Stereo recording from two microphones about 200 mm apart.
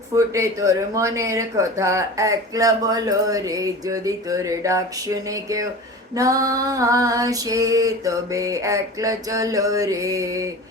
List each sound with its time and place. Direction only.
0.1 s speech: 15° right (ahead or behind)